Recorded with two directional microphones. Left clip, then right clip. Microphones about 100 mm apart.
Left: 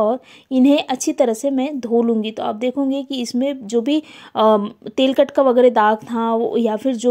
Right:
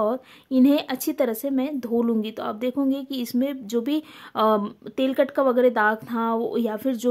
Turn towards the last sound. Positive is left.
turn(degrees=30)  # may be behind; listen again after turning